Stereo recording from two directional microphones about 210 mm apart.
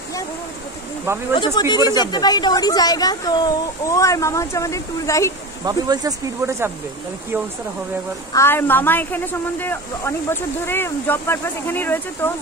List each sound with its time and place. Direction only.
1.3 s a woman's voice: 20° left (ahead or behind)
5.7 s speech: 15° right (ahead or behind)
8.3 s a woman's voice: 10° left (ahead or behind)